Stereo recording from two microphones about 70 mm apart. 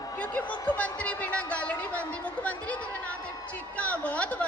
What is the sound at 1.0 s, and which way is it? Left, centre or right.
Speech, centre.